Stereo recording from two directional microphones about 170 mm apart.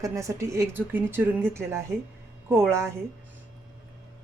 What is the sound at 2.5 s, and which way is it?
Speech, 15° right (ahead or behind).